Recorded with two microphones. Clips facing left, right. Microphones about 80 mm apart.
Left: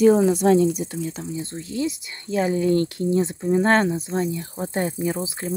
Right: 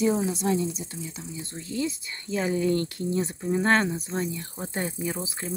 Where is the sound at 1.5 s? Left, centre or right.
Centre.